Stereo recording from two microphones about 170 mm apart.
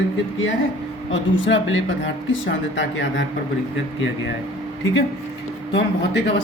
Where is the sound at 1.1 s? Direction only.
90° left.